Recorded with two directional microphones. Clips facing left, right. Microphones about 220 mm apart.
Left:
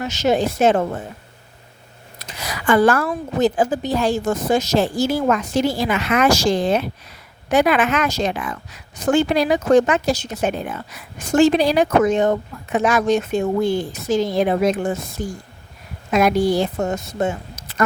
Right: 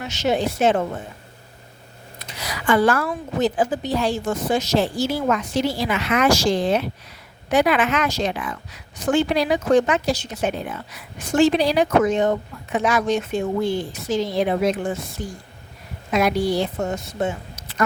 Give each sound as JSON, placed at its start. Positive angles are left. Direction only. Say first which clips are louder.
{"t": 0.0, "sound": "speech", "louder": "left 3 dB", "side_deg": 40}
{"t": 2.1, "sound": "speech", "louder": "left 2 dB", "side_deg": 45}